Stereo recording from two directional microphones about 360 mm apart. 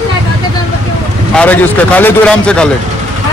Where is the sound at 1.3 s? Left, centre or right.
Centre.